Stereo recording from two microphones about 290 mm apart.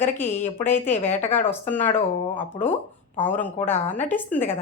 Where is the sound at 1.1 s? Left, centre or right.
Left.